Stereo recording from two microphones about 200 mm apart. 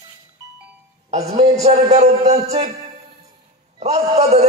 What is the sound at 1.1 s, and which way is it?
A man's voice, 30° right (ahead or behind).